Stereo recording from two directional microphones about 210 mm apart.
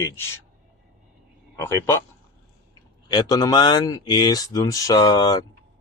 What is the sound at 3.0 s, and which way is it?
Speech, 20° left (ahead or behind).